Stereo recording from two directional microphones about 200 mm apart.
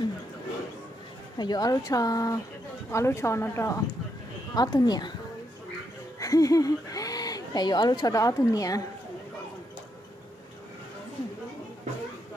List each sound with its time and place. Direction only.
1.4 s speech: 20° left (ahead or behind)
6.1 s speech: 15° left (ahead or behind)